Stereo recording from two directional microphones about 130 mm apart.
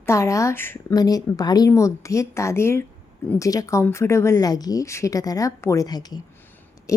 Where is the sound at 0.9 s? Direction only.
30° left (ahead or behind).